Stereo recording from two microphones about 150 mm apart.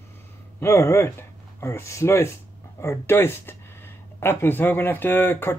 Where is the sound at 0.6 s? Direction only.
15° left (ahead or behind).